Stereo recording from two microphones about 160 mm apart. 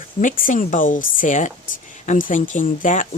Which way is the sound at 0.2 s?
55° left (ahead or behind).